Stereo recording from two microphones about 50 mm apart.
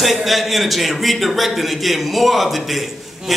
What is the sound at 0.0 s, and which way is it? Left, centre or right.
A man's voice, centre.